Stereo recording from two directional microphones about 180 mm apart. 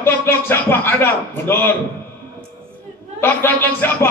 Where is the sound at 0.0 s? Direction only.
10° left (ahead or behind).